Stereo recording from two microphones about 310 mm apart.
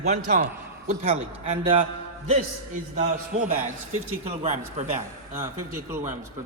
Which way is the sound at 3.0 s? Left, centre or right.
Right.